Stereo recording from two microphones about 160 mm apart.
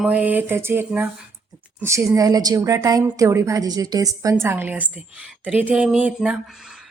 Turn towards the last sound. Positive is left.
turn(degrees=-5)  # may be behind; listen again after turning